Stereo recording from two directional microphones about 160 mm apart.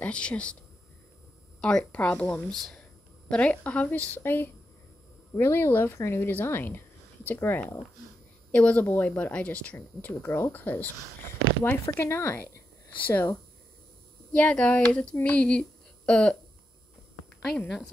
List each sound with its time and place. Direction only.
0.0 s speech: 10° left (ahead or behind)
1.6 s speech: 5° left (ahead or behind)
14.3 s speech: 5° left (ahead or behind)
17.6 s a woman's voice: 5° left (ahead or behind)